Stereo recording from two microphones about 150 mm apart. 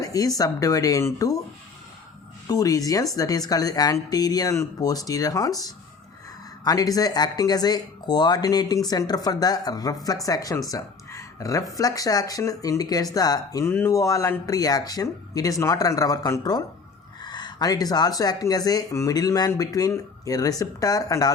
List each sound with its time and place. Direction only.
0.0 s speech: 25° left (ahead or behind)
2.5 s speech: 25° left (ahead or behind)